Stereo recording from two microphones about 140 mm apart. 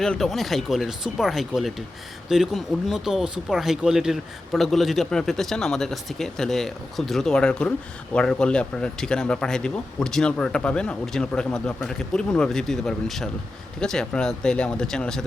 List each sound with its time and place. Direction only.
0.0 s speech: 5° left (ahead or behind)